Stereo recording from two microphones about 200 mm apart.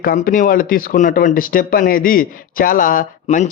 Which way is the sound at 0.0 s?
45° left (ahead or behind).